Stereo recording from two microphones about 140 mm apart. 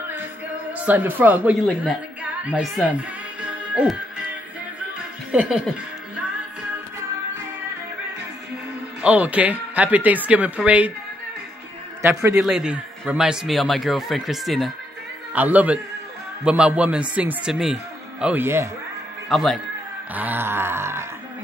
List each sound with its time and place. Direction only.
0.7 s a man's voice: 10° right (ahead or behind)
2.9 s music: 10° right (ahead or behind)
5.3 s speech: 10° right (ahead or behind)
9.0 s speech: 10° right (ahead or behind)
12.0 s speech: 20° right (ahead or behind)
12.4 s a man's voice: 5° right (ahead or behind)
15.3 s speech: 10° right (ahead or behind)
18.2 s speech: 15° right (ahead or behind)
19.2 s speech: centre (ahead or behind)
20.2 s speech: 15° right (ahead or behind)